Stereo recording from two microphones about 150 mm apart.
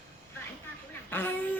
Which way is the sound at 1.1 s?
15° left (ahead or behind).